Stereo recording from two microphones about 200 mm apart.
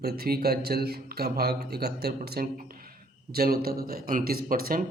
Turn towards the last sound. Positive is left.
turn(degrees=-45)  # may be behind; listen again after turning